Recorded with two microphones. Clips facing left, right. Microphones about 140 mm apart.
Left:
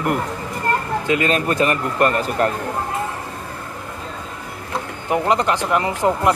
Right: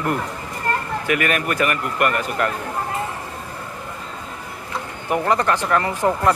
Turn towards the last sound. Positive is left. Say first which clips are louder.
# left 1 dB
turn(degrees=15)  # may be behind; listen again after turning